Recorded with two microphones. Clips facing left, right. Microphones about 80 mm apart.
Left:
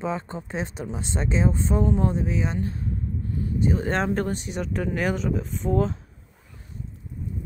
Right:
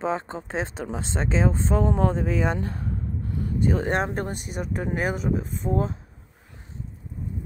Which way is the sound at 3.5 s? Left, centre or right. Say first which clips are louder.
Right 1 dB; right.